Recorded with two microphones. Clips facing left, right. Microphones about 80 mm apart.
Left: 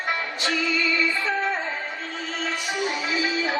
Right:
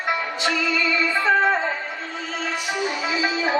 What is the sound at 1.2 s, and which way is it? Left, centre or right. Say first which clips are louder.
Music: right 7 dB; right.